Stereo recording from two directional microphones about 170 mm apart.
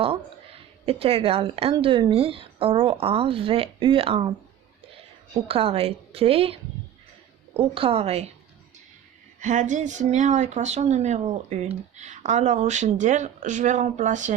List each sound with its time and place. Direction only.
0.9 s speech: 35° right (ahead or behind)
5.5 s speech: 35° right (ahead or behind)
9.4 s speech: 45° right (ahead or behind)